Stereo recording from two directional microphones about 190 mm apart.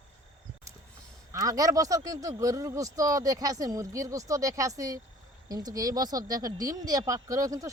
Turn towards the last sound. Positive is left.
turn(degrees=-15)  # may be behind; listen again after turning